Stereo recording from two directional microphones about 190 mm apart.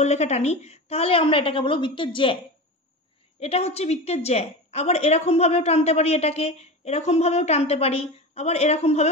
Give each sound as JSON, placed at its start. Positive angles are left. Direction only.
{"t": 0.0, "sound": "a woman's voice", "side_deg": 35}
{"t": 3.3, "sound": "a woman's voice", "side_deg": 30}